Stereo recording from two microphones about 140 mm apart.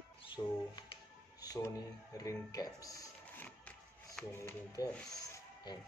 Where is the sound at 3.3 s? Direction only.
10° left (ahead or behind).